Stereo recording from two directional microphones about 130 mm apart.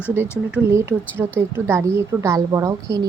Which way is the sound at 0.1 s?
20° right (ahead or behind).